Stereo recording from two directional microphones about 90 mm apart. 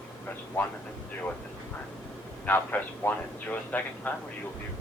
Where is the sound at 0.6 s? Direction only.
20° left (ahead or behind).